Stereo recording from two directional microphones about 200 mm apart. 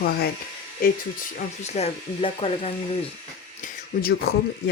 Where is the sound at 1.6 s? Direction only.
30° left (ahead or behind).